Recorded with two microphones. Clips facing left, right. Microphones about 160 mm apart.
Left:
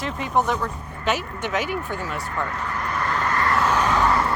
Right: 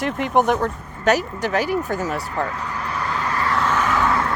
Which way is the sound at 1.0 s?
40° right (ahead or behind).